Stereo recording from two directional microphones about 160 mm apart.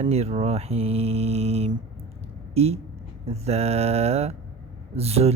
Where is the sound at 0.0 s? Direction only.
40° right (ahead or behind).